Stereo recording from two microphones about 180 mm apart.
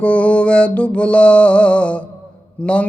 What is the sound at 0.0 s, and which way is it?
Mantra, 5° left (ahead or behind).